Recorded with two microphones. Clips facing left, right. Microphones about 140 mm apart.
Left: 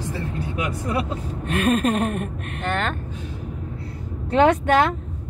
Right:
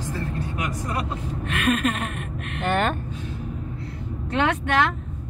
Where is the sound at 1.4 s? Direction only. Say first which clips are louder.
Left 3 dB; 35° left (ahead or behind).